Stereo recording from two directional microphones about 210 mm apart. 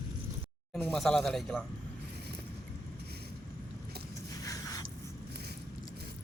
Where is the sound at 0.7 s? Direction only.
Centre (ahead or behind).